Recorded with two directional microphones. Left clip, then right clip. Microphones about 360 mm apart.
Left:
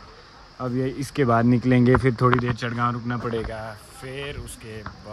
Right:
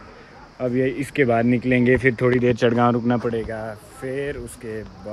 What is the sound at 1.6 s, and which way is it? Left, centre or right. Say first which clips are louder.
Speech: right 1 dB; left.